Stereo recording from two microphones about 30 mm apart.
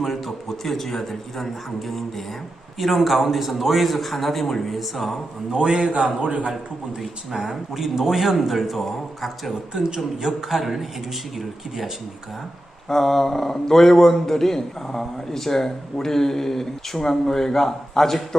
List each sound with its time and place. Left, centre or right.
0.0 s a man's voice: centre
5.5 s a man's voice: right
6.2 s a man's voice: right
7.0 s speech: centre
10.2 s a man's voice: centre
12.9 s a man's voice: centre